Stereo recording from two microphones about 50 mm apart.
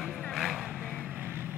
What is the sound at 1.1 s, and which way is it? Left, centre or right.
Vehicle, right.